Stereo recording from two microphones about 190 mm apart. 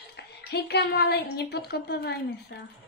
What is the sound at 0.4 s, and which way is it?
A woman's voice, 60° left (ahead or behind).